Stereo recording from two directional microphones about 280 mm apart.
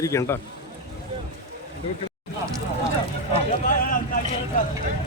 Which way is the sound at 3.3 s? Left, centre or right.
Left.